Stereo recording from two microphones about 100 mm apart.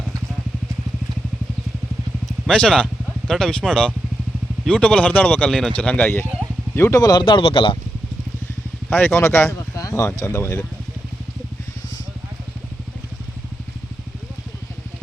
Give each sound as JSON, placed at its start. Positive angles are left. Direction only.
{"t": 2.5, "sound": "speech", "side_deg": 10}
{"t": 7.0, "sound": "speech", "side_deg": 40}
{"t": 7.3, "sound": "speech", "side_deg": 60}
{"t": 8.9, "sound": "speech", "side_deg": 20}